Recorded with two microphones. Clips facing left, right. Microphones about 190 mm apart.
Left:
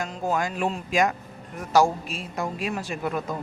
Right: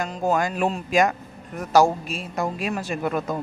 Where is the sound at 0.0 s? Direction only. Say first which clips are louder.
Right 4 dB; 50° right (ahead or behind).